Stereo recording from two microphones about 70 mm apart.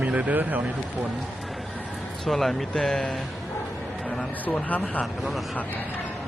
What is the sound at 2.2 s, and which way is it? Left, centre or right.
Speech, centre.